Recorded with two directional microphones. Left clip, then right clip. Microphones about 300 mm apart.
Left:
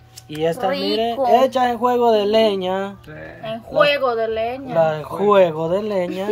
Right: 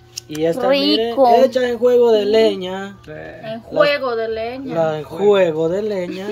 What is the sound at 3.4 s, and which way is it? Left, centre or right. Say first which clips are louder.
A woman's voice: right 1 dB; left.